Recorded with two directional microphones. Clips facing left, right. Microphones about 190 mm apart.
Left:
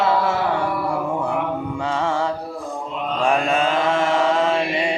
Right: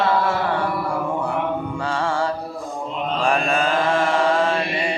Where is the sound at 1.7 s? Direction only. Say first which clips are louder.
Left 3 dB; 20° left (ahead or behind).